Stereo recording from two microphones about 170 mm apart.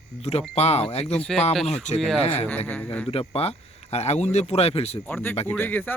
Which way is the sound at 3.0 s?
35° left (ahead or behind).